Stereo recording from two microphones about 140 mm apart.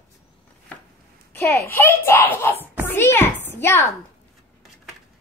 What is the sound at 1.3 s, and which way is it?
A child's voice, 20° left (ahead or behind).